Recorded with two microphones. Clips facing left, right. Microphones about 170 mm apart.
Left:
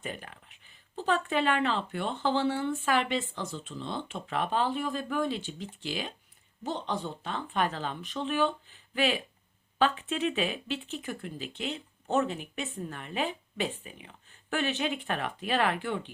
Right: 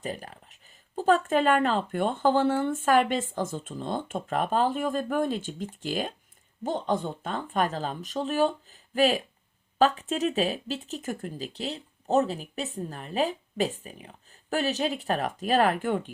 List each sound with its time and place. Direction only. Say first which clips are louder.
0.0 s speech: right 4 dB; 35° right (ahead or behind)